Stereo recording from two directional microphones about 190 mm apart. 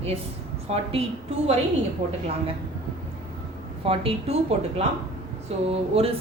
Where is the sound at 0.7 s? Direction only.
30° right (ahead or behind).